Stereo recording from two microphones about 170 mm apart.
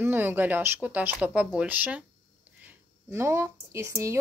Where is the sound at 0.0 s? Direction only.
10° right (ahead or behind).